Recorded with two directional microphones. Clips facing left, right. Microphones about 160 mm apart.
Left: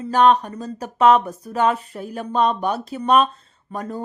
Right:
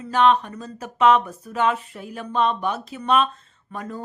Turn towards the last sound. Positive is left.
turn(degrees=40)  # may be behind; listen again after turning